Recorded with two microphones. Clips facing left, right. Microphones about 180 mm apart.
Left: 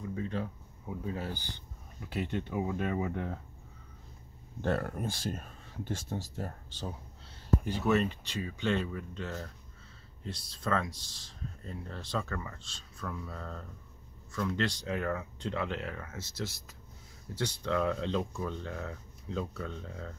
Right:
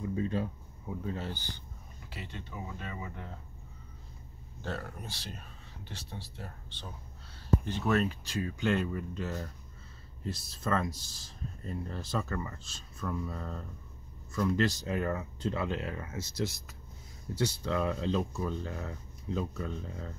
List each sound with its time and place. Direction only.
0.8 s speech: 10° left (ahead or behind)
2.1 s speech: 60° left (ahead or behind)
4.6 s speech: 60° left (ahead or behind)
7.6 s speech: 5° left (ahead or behind)